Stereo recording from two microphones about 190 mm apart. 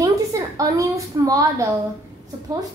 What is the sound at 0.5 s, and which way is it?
A woman's voice, 20° right (ahead or behind).